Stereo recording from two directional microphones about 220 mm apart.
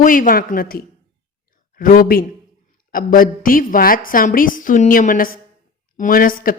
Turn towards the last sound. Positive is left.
turn(degrees=40)  # may be behind; listen again after turning